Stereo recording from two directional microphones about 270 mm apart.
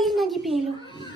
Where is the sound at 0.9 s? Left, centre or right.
Centre.